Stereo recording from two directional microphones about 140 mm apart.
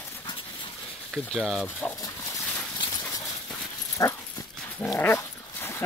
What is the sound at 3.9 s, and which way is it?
Dog, 25° left (ahead or behind).